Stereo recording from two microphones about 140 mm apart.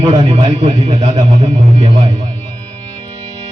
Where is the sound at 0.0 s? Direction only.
35° right (ahead or behind).